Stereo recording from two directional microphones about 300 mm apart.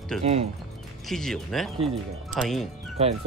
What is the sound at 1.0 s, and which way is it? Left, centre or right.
Speech, centre.